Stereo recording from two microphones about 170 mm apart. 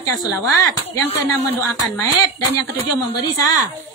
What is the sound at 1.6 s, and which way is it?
A woman's voice, 15° left (ahead or behind).